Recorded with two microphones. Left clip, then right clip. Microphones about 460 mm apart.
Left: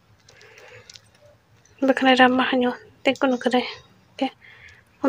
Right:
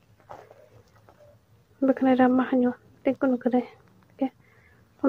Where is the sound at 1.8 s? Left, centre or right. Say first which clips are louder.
Left 5 dB; right.